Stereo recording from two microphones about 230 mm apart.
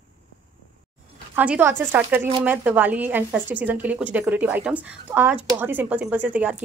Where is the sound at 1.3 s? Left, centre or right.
Centre.